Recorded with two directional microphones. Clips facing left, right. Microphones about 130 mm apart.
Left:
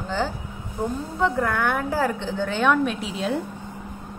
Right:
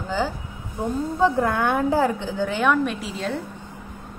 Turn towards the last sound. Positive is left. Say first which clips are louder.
# left 2 dB
turn(degrees=5)  # may be behind; listen again after turning